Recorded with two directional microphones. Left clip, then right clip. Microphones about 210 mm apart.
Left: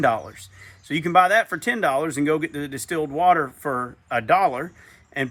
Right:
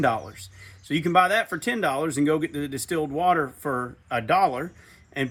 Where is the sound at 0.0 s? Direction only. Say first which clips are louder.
Left 3 dB; 15° left (ahead or behind).